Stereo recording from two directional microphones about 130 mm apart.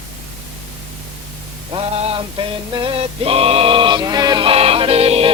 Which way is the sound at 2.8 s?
45° right (ahead or behind).